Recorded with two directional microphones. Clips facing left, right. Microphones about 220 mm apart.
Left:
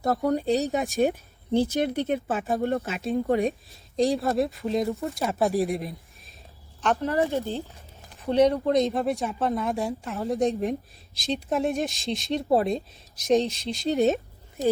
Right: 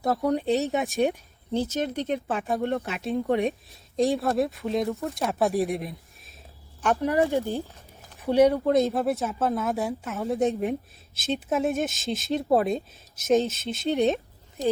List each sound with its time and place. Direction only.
0.0 s speech: centre (ahead or behind)
1.5 s speech: 10° left (ahead or behind)
6.8 s speech: 15° right (ahead or behind)